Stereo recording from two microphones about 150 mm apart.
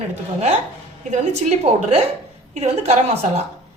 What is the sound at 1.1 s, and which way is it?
A woman's voice, 50° right (ahead or behind).